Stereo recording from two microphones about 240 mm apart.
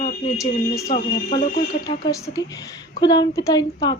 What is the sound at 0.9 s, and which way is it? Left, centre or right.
Speech, left.